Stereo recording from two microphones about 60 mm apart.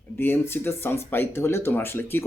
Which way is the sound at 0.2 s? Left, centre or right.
Left.